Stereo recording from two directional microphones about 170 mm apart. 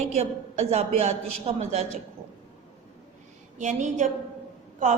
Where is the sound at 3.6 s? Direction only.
45° right (ahead or behind).